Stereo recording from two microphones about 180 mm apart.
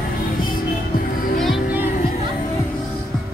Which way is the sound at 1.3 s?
Centre (ahead or behind).